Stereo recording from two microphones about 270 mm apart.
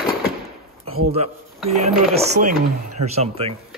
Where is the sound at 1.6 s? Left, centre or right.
Right.